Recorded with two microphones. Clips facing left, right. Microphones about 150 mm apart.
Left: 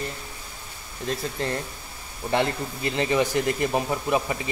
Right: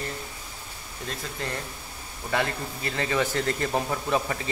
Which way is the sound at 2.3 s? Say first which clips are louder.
Left 3 dB; 25° left (ahead or behind).